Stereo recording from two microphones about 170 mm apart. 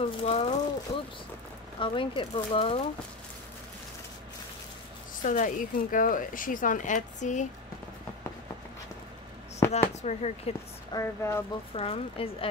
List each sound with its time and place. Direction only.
0.2 s speech: 40° left (ahead or behind)
5.2 s speech: 50° left (ahead or behind)
9.6 s a sound: 15° left (ahead or behind)
10.0 s speech: 40° left (ahead or behind)
10.9 s speech: 15° left (ahead or behind)
11.7 s speech: 35° left (ahead or behind)